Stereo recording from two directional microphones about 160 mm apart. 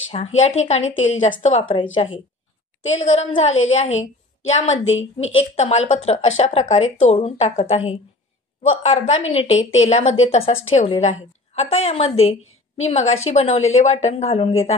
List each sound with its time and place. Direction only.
0.1 s a woman's voice: 45° left (ahead or behind)
3.0 s a woman's voice: 45° left (ahead or behind)